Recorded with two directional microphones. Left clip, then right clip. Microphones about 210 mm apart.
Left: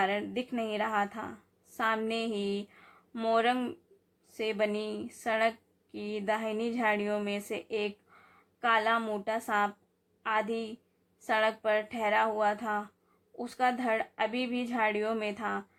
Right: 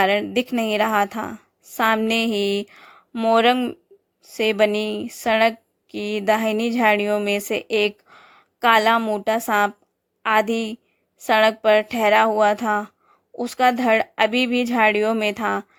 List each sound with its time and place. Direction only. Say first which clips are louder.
0.0 s a woman's voice: right 12 dB; 45° right (ahead or behind)